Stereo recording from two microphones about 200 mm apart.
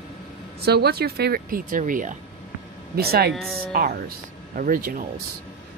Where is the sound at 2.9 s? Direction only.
50° right (ahead or behind).